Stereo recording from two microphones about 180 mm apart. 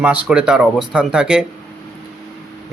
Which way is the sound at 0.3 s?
5° right (ahead or behind).